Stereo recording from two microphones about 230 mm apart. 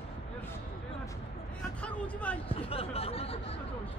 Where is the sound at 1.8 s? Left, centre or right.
Centre.